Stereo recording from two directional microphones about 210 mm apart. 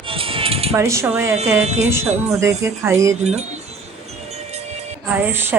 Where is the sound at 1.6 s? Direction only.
30° right (ahead or behind).